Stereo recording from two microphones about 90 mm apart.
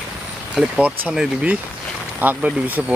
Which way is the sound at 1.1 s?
10° right (ahead or behind).